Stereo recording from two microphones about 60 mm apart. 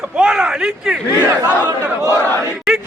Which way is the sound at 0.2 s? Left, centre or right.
Centre.